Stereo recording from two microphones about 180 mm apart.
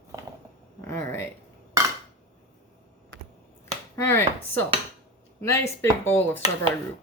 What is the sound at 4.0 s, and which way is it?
Speech, 10° left (ahead or behind).